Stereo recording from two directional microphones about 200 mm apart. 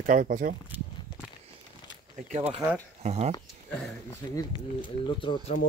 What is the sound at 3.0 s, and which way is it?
Speech, 35° right (ahead or behind).